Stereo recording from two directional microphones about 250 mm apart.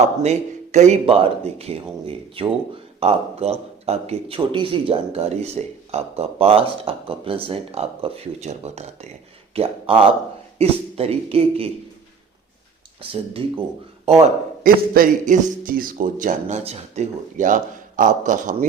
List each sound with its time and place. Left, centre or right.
0.2 s speech: right
13.4 s a man's voice: right